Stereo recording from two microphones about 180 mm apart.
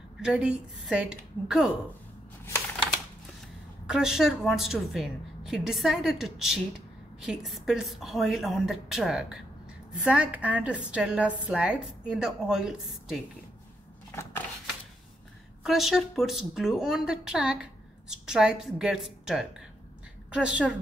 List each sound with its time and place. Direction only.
0.2 s a woman's voice: 5° right (ahead or behind)
3.8 s a woman's voice: 5° right (ahead or behind)
15.6 s a woman's voice: centre (ahead or behind)